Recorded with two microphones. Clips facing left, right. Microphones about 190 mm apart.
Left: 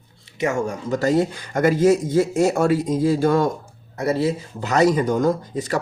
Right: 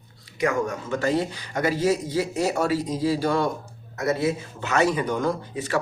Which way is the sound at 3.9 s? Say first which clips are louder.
Left 3 dB; 30° left (ahead or behind).